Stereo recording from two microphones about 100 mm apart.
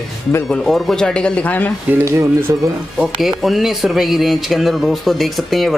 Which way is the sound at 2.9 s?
Centre (ahead or behind).